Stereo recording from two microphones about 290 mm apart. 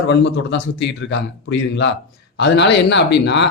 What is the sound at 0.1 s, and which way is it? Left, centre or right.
Speech, left.